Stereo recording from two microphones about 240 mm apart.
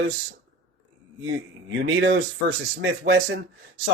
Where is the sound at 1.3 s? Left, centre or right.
Right.